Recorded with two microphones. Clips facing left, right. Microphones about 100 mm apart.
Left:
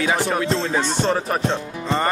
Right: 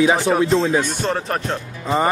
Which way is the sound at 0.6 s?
10° right (ahead or behind).